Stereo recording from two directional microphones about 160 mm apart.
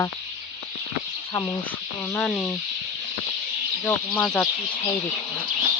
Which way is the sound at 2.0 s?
5° left (ahead or behind).